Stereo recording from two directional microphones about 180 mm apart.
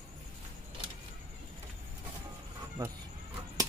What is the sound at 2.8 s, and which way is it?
Speech, 20° right (ahead or behind).